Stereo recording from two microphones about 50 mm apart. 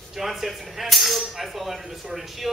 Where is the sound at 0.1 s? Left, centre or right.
Centre.